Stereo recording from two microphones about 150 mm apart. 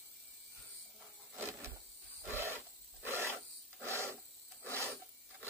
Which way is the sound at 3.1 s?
15° right (ahead or behind).